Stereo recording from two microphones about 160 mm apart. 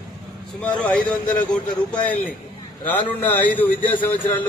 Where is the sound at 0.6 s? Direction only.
5° left (ahead or behind).